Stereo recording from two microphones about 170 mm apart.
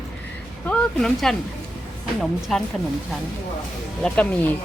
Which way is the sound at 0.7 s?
5° left (ahead or behind).